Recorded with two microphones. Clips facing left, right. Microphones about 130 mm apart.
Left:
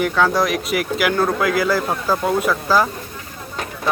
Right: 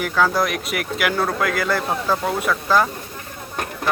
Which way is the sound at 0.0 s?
Centre (ahead or behind).